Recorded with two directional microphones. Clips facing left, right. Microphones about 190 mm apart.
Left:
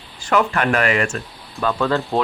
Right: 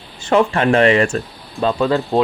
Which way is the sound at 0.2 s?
25° right (ahead or behind).